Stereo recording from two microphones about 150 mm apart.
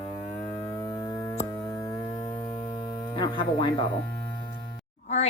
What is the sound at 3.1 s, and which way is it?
Speech, 35° left (ahead or behind).